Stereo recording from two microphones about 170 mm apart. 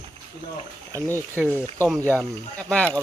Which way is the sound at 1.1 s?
15° left (ahead or behind).